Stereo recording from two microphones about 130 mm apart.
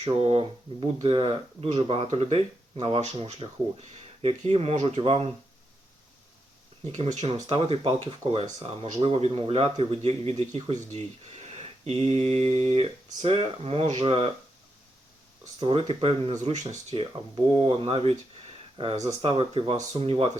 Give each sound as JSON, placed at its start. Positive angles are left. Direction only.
{"t": 0.0, "sound": "a man's voice", "side_deg": -50}
{"t": 6.9, "sound": "a man's voice", "side_deg": -60}
{"t": 15.6, "sound": "a man's voice", "side_deg": -45}
{"t": 16.3, "sound": "speech", "side_deg": -65}
{"t": 16.9, "sound": "a man's voice", "side_deg": -45}
{"t": 19.2, "sound": "a man's voice", "side_deg": -45}